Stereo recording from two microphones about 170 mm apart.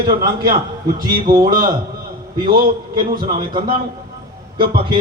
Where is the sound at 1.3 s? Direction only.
60° right (ahead or behind).